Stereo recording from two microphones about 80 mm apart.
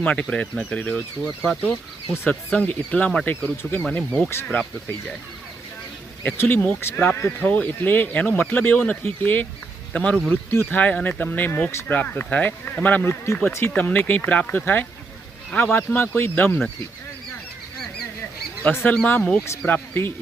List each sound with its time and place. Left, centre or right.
0.0 s speech: centre
3.6 s speech: left
6.3 s speech: left
6.9 s speech: centre
10.5 s speech: left
10.8 s speech: centre
13.2 s speech: left
18.6 s speech: left